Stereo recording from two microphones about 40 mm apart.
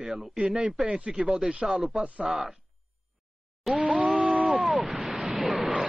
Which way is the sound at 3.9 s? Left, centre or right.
Right.